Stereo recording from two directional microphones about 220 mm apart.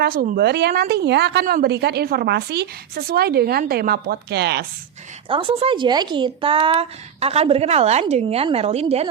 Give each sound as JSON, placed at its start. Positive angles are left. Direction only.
{"t": 0.0, "sound": "a woman's voice", "side_deg": -40}
{"t": 5.3, "sound": "speech", "side_deg": -25}